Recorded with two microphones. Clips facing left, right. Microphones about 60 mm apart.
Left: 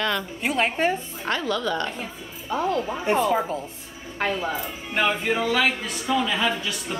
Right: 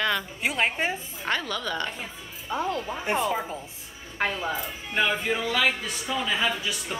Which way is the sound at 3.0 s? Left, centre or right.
Centre.